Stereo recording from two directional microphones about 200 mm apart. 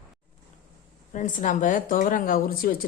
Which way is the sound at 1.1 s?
40° left (ahead or behind).